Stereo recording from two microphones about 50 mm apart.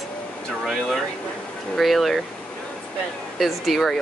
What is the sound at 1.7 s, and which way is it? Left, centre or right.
Speech, centre.